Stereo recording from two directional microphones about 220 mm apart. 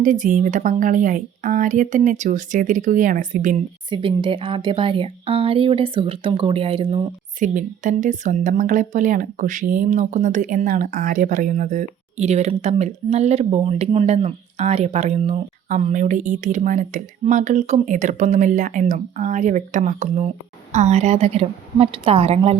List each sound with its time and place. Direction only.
0.0 s speech: 35° right (ahead or behind)
3.8 s a woman's voice: 20° right (ahead or behind)